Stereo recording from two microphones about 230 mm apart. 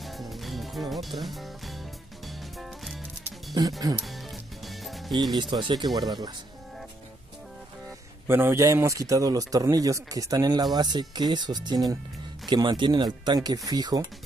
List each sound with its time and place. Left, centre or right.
0.0 s music: centre
3.9 s a man's voice: centre
4.6 s music: centre
5.4 s a man's voice: right
8.3 s a man's voice: centre